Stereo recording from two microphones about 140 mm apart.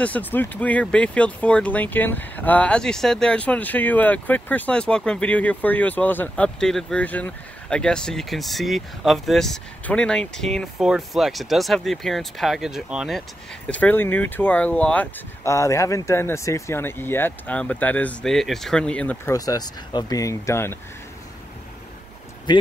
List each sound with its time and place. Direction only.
0.0 s speech: 10° left (ahead or behind); by 13.2 s 5° right (ahead or behind)
13.7 s speech: 10° left (ahead or behind)
15.4 s speech: 20° left (ahead or behind)
19.3 s speech: 25° left (ahead or behind)
22.5 s speech: 30° left (ahead or behind)